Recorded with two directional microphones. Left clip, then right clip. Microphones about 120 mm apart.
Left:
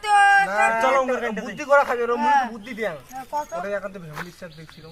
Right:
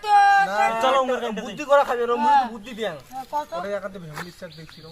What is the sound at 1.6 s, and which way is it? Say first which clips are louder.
A man's voice: even; 10° right (ahead or behind).